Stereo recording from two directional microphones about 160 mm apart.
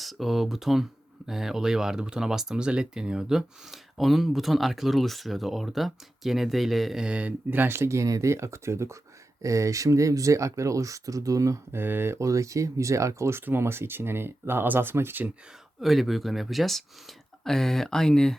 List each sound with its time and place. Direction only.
0.0 s speech: centre (ahead or behind)
15.8 s speech: centre (ahead or behind)